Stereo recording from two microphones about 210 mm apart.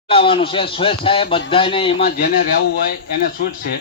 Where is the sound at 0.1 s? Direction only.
25° left (ahead or behind).